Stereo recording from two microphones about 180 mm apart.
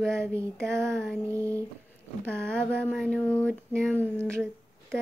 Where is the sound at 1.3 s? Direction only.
15° right (ahead or behind).